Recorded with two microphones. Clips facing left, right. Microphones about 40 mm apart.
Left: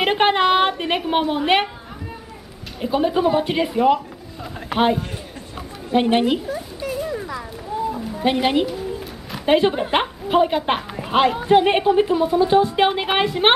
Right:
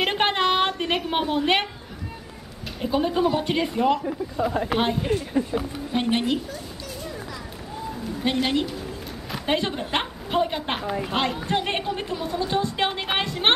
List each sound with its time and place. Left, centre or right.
0.0 s a woman's voice: centre
2.8 s a woman's voice: centre
5.9 s a sound: centre
8.2 s a woman's voice: centre